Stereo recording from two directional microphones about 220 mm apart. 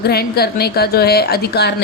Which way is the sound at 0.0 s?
45° left (ahead or behind).